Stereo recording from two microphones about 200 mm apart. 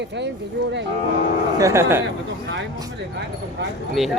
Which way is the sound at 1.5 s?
15° right (ahead or behind).